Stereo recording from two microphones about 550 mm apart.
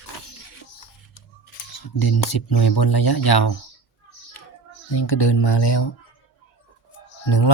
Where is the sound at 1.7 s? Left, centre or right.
Left.